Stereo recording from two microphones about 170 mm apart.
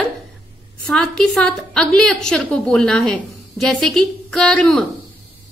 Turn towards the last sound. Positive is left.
turn(degrees=5)  # may be behind; listen again after turning